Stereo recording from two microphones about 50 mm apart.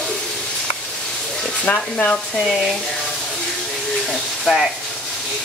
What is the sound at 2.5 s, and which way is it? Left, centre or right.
Frying, centre.